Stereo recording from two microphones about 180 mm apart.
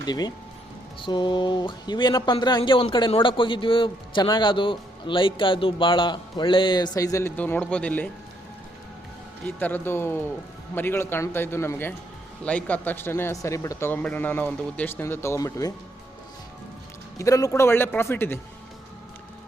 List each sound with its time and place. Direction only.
0.0 s speech: 20° left (ahead or behind); by 8.1 s 5° left (ahead or behind)
9.6 s speech: 10° left (ahead or behind)
17.2 s speech: 20° left (ahead or behind)